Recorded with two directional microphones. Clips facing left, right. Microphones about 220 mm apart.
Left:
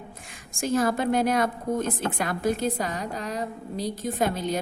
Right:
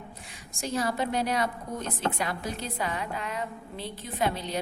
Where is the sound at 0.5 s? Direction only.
50° left (ahead or behind).